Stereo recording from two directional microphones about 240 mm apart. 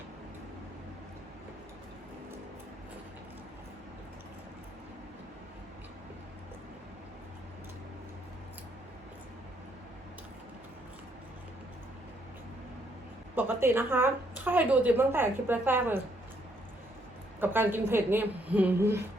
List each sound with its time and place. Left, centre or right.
13.3 s a woman's voice: centre
17.4 s a woman's voice: centre